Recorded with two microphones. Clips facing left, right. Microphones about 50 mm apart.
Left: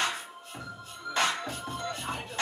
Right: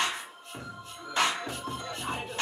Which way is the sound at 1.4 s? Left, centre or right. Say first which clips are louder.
Left 1 dB; centre.